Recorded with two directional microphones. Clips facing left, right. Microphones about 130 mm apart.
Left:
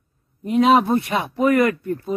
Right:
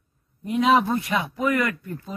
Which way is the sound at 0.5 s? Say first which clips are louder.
Left 4 dB; 25° left (ahead or behind).